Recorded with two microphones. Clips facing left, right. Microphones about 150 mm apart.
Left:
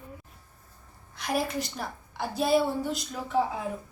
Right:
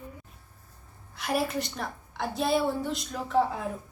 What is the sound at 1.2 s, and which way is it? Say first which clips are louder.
A woman's voice: right 1 dB; centre (ahead or behind).